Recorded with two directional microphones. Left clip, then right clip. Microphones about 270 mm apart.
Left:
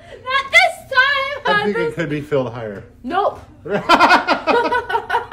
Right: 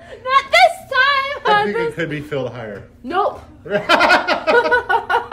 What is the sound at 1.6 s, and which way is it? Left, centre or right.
Speech, centre.